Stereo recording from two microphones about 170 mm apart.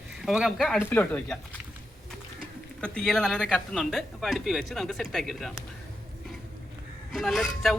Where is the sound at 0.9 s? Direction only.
10° left (ahead or behind).